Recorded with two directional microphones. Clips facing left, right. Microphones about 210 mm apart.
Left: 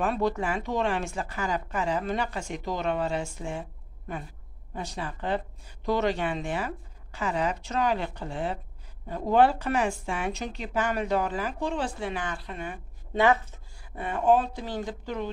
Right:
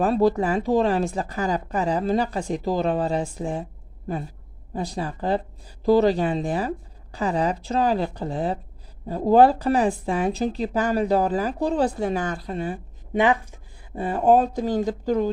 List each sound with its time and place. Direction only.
0.0 s a woman's voice: 35° right (ahead or behind)
4.7 s a woman's voice: 35° right (ahead or behind)
13.1 s a woman's voice: 15° right (ahead or behind)
13.9 s a woman's voice: 35° right (ahead or behind)